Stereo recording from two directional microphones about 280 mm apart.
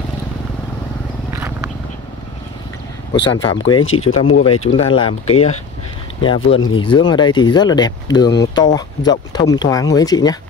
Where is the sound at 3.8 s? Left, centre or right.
Left.